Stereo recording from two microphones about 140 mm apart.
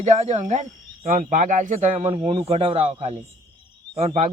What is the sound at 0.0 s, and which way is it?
A man's voice, 55° right (ahead or behind).